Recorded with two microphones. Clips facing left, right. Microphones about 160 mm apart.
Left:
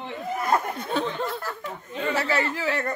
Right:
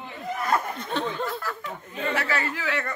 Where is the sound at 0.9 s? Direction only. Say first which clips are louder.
Left 1 dB; centre (ahead or behind).